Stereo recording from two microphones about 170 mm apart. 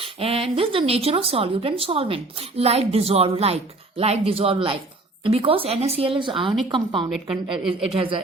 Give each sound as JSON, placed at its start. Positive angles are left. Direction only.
{"t": 0.0, "sound": "a woman's voice", "side_deg": -35}
{"t": 7.1, "sound": "a woman's voice", "side_deg": -5}
{"t": 7.9, "sound": "speech", "side_deg": -30}